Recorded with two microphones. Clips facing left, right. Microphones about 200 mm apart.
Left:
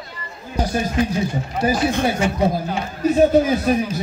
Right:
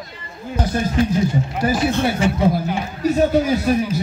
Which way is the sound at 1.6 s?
15° left (ahead or behind).